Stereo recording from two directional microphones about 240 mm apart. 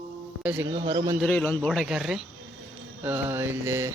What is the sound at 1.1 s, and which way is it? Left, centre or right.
Speech, centre.